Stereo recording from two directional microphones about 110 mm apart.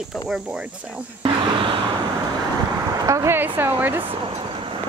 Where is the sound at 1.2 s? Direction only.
50° right (ahead or behind).